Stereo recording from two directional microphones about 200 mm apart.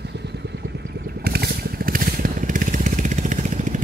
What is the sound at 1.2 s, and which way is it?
Vehicle, 55° right (ahead or behind).